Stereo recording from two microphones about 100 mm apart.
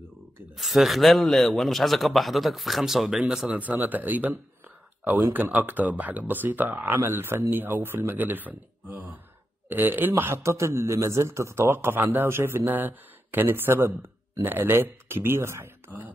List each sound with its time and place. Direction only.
0.6 s a man's voice: centre (ahead or behind); by 16.1 s 20° right (ahead or behind)